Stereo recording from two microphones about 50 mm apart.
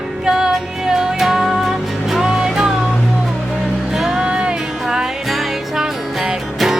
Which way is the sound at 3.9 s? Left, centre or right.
Centre.